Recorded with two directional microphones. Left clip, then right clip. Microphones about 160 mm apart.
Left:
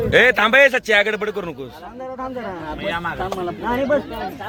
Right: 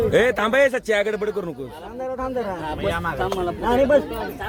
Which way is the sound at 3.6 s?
50° right (ahead or behind).